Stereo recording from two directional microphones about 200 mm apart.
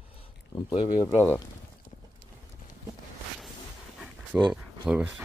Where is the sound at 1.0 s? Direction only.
10° left (ahead or behind).